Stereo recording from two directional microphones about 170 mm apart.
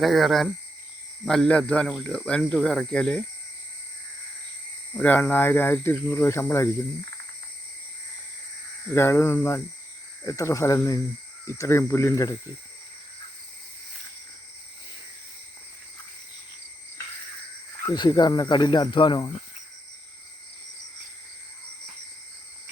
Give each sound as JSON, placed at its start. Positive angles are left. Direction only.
{"t": 0.0, "sound": "speech", "side_deg": 0}
{"t": 4.9, "sound": "speech", "side_deg": 10}
{"t": 9.0, "sound": "speech", "side_deg": 15}
{"t": 17.8, "sound": "speech", "side_deg": 25}